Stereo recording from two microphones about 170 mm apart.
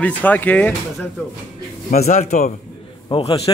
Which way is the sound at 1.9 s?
45° left (ahead or behind).